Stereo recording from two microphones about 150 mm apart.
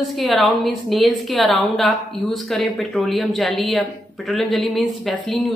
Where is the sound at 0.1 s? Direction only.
Centre (ahead or behind).